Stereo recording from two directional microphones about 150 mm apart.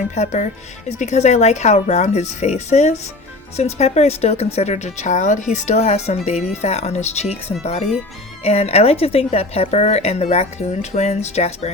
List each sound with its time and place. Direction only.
0.1 s a woman's voice: 50° left (ahead or behind)